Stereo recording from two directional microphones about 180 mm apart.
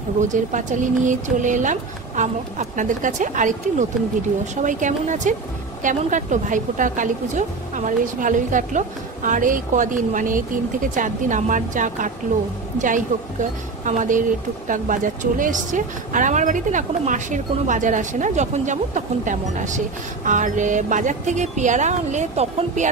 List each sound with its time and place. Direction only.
0.2 s a woman's voice: 45° right (ahead or behind)
4.6 s a woman's voice: 45° right (ahead or behind)